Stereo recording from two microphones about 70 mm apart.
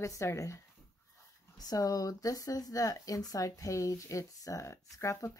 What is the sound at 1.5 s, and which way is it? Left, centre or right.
Speech, left.